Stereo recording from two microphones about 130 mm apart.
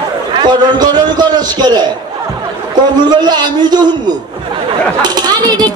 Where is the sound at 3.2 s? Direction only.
35° right (ahead or behind).